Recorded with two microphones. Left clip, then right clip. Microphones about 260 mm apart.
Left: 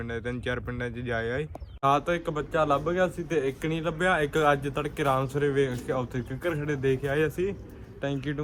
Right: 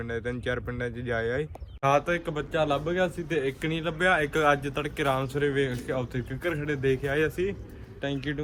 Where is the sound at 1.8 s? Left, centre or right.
Centre.